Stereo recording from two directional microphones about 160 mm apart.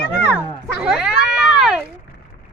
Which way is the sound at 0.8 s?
5° right (ahead or behind).